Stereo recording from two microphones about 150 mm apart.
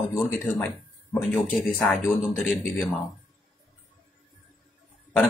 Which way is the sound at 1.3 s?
5° left (ahead or behind).